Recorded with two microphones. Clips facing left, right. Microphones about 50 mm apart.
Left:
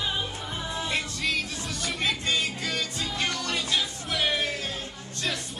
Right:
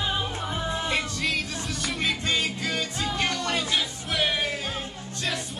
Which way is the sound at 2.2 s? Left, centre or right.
Centre.